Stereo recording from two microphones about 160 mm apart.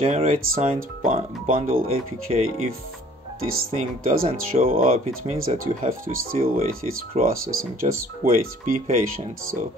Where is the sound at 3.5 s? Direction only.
65° right (ahead or behind).